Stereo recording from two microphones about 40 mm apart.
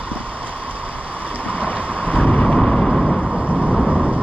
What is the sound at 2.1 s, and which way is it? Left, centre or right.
Vehicle, left.